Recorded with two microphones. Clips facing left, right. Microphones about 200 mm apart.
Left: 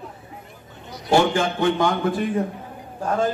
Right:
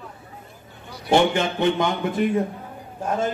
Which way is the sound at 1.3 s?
20° right (ahead or behind).